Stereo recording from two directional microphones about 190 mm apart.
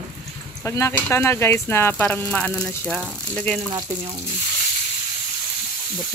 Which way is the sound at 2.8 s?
5° right (ahead or behind).